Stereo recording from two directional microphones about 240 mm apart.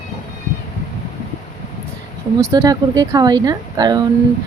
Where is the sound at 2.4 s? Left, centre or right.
Centre.